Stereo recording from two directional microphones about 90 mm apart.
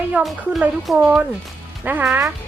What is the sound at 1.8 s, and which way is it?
Speech, 20° right (ahead or behind).